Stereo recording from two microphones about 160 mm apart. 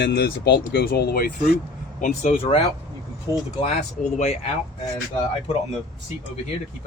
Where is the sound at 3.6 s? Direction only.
45° left (ahead or behind).